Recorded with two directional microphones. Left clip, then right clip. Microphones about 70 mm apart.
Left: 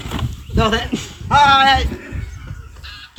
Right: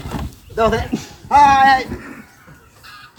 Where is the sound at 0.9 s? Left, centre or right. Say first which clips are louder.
Left 1 dB; centre.